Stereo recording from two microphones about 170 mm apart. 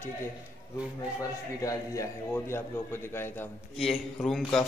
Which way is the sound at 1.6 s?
20° left (ahead or behind).